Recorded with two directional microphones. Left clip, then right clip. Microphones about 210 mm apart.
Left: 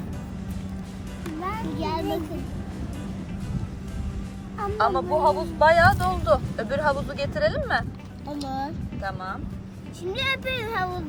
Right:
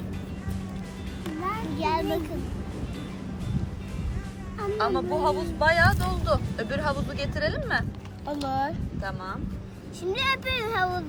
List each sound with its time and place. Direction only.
1.4 s children playing: centre (ahead or behind)
4.8 s speech: 5° right (ahead or behind)
8.3 s speech: 25° right (ahead or behind)
9.0 s speech: 5° right (ahead or behind)